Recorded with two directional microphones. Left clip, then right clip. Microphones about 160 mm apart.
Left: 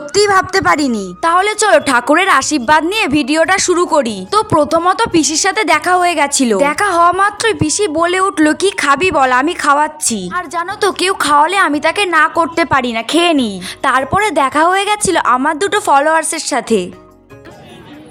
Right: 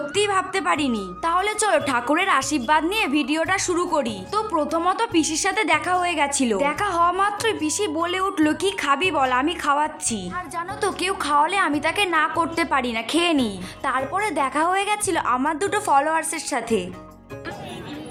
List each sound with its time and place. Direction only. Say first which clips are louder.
0.1 s a woman's voice: left 12 dB; 35° left (ahead or behind)
10.3 s a woman's voice: left 10 dB; 50° left (ahead or behind)
13.8 s a woman's voice: left 11 dB; 65° left (ahead or behind); by 16.8 s 45° left (ahead or behind)